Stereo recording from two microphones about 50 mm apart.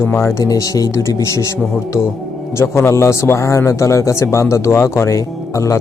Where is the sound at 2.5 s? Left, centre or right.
Left.